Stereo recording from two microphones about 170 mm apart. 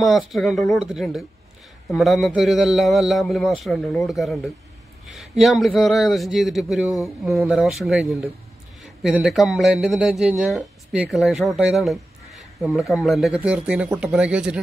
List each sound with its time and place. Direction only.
0.0 s speech: centre (ahead or behind)